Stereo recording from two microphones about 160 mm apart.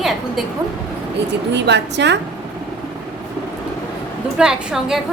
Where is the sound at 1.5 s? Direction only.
90° right.